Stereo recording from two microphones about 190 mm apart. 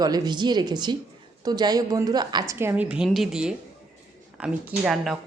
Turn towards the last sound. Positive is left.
turn(degrees=0)  # may be behind; listen again after turning